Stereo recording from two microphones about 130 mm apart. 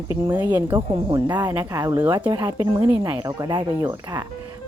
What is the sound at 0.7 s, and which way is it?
A woman's voice, 35° right (ahead or behind).